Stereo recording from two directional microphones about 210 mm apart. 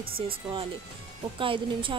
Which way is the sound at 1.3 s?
25° right (ahead or behind).